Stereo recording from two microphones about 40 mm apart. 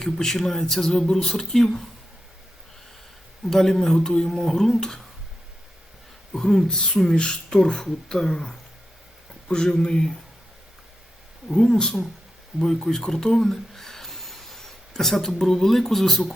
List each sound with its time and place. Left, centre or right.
0.0 s speech: centre
3.4 s speech: centre
6.3 s speech: centre
11.4 s speech: centre
12.5 s a sound: centre
15.4 s speech: centre